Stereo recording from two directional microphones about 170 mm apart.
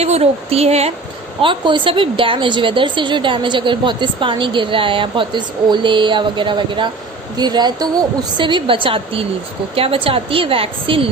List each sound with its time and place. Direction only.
0.0 s a woman's voice: 40° right (ahead or behind)